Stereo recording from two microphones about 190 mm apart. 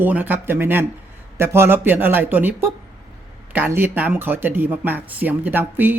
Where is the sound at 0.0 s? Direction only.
10° right (ahead or behind).